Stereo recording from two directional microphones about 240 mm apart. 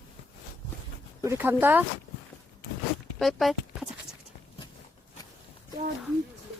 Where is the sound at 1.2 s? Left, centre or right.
Centre.